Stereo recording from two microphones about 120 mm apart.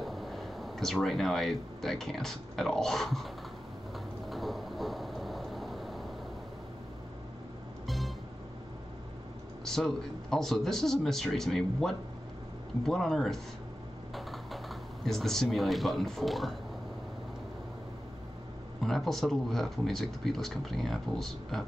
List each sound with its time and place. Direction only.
0.0 s speech: centre (ahead or behind)
4.3 s vehicle: centre (ahead or behind)
7.8 s music: centre (ahead or behind)
9.7 s speech: 5° left (ahead or behind)
18.8 s speech: centre (ahead or behind)